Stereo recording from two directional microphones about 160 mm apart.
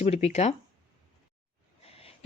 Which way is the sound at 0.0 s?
40° left (ahead or behind).